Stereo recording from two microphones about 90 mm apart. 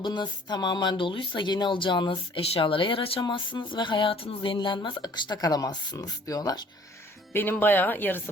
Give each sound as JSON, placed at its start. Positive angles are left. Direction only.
{"t": 0.0, "sound": "speech", "side_deg": 55}
{"t": 3.2, "sound": "a sound", "side_deg": 60}
{"t": 4.5, "sound": "speech", "side_deg": 60}
{"t": 7.6, "sound": "speech", "side_deg": 20}